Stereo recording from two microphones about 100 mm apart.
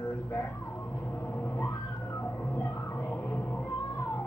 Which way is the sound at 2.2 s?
25° left (ahead or behind).